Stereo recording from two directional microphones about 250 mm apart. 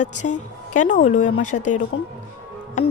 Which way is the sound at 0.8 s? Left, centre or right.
Left.